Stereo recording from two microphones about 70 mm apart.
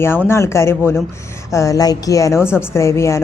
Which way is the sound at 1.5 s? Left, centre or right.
Left.